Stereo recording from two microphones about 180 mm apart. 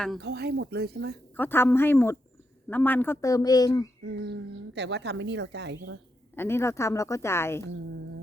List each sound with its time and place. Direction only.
0.2 s speech: 65° right (ahead or behind)
1.4 s a woman's voice: 10° left (ahead or behind)
4.0 s speech: 70° right (ahead or behind)
6.3 s a woman's voice: 15° left (ahead or behind)